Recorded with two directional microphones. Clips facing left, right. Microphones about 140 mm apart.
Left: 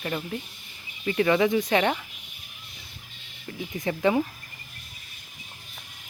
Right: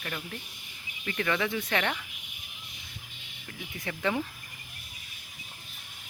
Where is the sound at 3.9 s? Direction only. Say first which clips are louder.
Left 7 dB; 25° left (ahead or behind).